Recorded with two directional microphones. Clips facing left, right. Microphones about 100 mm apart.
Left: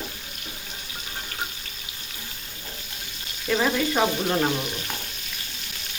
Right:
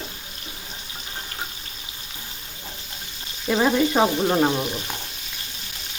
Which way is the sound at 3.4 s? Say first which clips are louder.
Right 4 dB; 20° right (ahead or behind).